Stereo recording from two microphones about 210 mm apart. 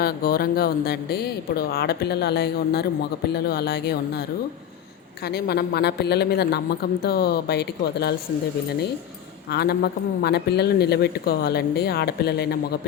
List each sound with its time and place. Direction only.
0.0 s speech: 45° left (ahead or behind)
5.3 s speech: 50° left (ahead or behind)
9.5 s speech: 50° left (ahead or behind)